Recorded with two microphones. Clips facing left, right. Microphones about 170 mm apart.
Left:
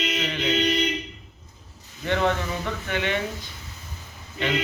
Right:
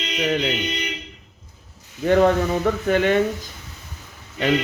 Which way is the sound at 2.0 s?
45° right (ahead or behind).